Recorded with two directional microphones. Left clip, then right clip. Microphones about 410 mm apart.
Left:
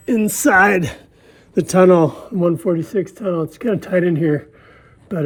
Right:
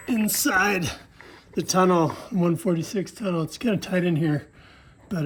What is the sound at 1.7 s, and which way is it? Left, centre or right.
Speech, left.